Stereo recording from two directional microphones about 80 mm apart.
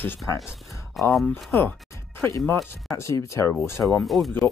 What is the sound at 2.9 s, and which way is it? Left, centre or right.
Speech, left.